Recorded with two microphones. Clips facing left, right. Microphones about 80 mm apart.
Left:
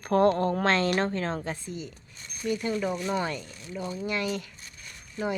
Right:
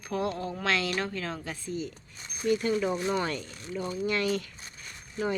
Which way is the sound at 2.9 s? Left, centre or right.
Centre.